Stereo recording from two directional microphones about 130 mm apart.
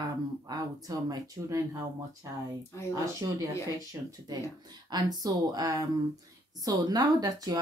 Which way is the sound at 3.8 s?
30° right (ahead or behind).